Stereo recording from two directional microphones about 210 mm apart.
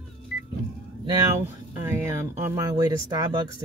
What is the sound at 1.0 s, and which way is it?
Speech, 10° right (ahead or behind).